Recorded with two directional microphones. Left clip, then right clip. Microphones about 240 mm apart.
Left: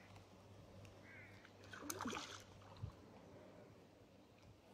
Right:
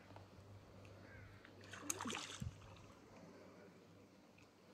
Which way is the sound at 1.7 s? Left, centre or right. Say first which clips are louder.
Right 1 dB; centre.